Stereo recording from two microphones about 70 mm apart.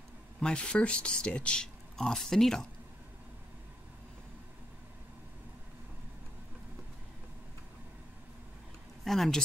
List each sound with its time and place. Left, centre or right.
0.4 s speech: centre
9.0 s speech: centre